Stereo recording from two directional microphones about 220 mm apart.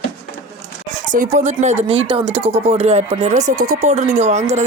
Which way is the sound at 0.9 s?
35° right (ahead or behind).